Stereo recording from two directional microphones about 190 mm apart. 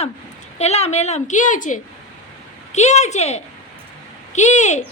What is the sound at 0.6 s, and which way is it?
A woman's voice, 35° left (ahead or behind).